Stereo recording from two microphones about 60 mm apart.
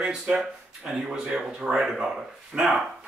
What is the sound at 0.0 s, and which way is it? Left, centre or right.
Speech, centre.